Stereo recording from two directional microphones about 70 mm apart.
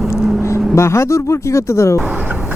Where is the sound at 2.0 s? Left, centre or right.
Right.